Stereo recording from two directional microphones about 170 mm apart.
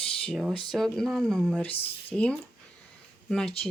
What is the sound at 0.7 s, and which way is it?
Speech, centre (ahead or behind).